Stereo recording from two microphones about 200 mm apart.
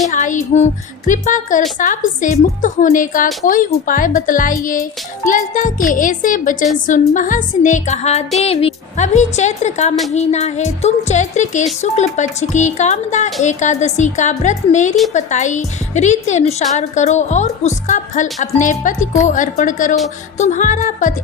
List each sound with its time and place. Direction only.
0.1 s a woman's voice: 40° left (ahead or behind)